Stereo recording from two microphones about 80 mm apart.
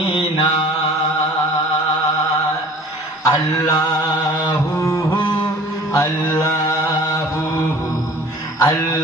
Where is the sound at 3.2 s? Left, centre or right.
Left.